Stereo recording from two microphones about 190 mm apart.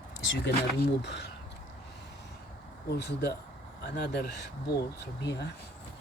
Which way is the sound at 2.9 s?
60° left (ahead or behind).